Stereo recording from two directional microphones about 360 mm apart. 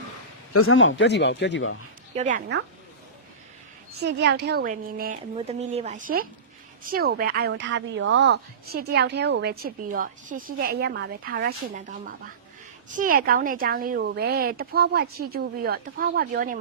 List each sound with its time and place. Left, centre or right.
0.5 s a man's voice: left
2.1 s a woman's voice: right
3.9 s a woman's voice: right